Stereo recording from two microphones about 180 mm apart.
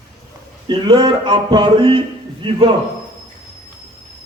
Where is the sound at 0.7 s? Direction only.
25° right (ahead or behind).